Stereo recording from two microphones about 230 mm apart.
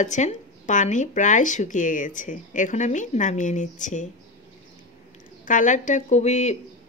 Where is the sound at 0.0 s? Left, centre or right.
Left.